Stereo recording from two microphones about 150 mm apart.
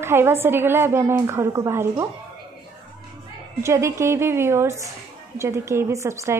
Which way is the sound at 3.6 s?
20° right (ahead or behind).